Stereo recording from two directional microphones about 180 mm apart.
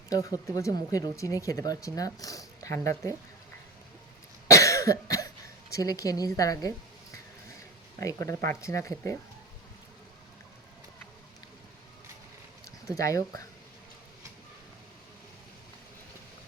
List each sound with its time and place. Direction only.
0.1 s speech: 20° left (ahead or behind)
4.4 s cough: 15° left (ahead or behind)
5.7 s speech: 20° left (ahead or behind)
7.9 s speech: 15° left (ahead or behind)
13.0 s speech: 20° left (ahead or behind)